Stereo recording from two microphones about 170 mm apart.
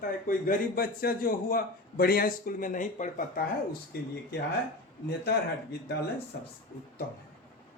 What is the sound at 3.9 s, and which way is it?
Speech, 70° left (ahead or behind).